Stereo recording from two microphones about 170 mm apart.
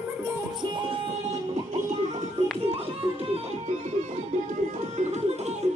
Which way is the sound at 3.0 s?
35° right (ahead or behind).